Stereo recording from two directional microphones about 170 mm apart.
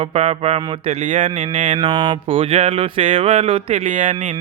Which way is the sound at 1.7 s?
25° right (ahead or behind).